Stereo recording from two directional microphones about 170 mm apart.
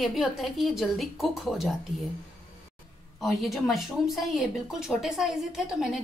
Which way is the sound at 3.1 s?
Centre (ahead or behind).